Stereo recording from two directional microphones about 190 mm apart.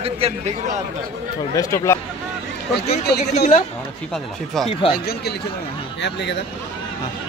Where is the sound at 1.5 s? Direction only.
15° left (ahead or behind).